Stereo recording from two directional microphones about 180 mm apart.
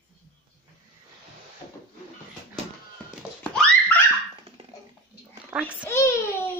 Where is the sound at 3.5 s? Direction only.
5° left (ahead or behind).